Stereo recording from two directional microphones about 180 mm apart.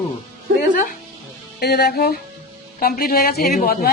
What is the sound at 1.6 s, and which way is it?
A woman's voice, 60° left (ahead or behind).